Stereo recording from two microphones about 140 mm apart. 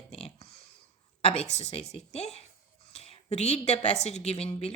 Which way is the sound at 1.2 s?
50° left (ahead or behind).